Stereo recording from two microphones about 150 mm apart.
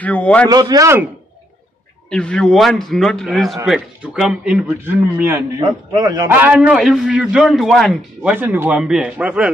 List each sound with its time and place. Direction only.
0.0 s a man's voice: 10° left (ahead or behind)
0.5 s speech: 25° right (ahead or behind)
2.0 s a man's voice: 5° left (ahead or behind); by 6.3 s 25° right (ahead or behind)
6.3 s a man's voice: 10° right (ahead or behind)